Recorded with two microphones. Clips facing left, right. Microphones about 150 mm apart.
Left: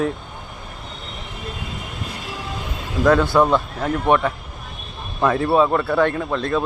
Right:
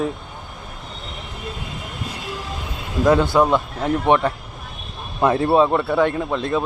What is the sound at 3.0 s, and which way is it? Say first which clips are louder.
Speech: even; 20° right (ahead or behind).